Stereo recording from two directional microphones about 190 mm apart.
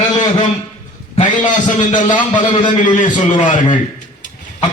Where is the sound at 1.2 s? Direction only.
40° left (ahead or behind).